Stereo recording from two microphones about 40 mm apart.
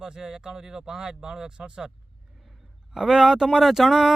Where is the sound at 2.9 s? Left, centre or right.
Centre.